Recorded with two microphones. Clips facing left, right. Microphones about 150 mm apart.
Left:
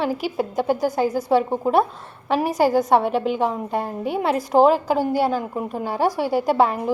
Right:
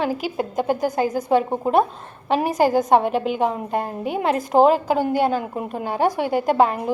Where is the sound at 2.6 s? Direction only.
20° right (ahead or behind).